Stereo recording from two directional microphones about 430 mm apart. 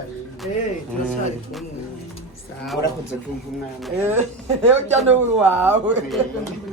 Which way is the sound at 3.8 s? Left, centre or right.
Centre.